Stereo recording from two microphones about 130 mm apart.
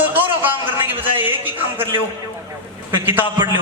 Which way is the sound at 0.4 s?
15° right (ahead or behind).